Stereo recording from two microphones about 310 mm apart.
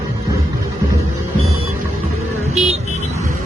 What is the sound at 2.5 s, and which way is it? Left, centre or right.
Vehicle, centre.